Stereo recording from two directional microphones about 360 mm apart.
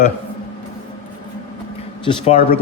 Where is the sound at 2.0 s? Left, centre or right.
Centre.